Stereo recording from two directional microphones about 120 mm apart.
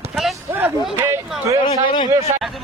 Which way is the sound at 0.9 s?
20° right (ahead or behind).